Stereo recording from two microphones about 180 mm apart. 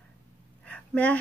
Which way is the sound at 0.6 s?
10° left (ahead or behind).